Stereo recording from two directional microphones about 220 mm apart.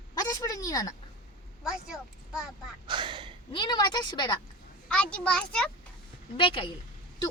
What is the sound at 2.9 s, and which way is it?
Speech, 20° right (ahead or behind).